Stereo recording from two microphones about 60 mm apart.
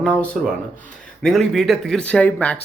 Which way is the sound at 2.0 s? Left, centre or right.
Left.